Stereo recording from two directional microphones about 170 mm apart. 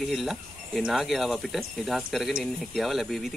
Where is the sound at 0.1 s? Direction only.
Centre (ahead or behind).